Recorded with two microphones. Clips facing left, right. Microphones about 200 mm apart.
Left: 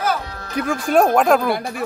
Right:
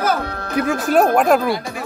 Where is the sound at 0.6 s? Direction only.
5° right (ahead or behind).